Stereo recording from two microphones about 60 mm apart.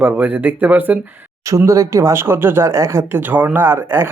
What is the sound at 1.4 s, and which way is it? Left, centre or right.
Speech, right.